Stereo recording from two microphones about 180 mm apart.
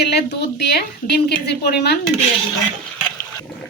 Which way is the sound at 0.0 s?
65° left (ahead or behind).